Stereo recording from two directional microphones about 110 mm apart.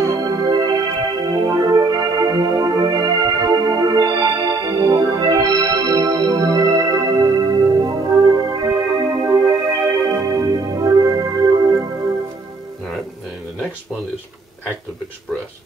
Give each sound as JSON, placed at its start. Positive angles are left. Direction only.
{"t": 0.2, "sound": "music", "side_deg": -35}